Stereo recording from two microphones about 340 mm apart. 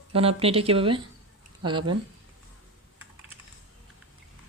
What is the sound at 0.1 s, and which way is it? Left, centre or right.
Speech, centre.